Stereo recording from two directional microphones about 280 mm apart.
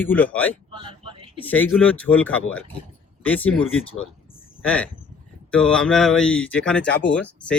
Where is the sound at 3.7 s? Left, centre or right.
Left.